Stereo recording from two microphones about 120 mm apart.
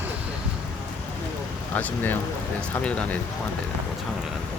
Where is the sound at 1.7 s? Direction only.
15° left (ahead or behind).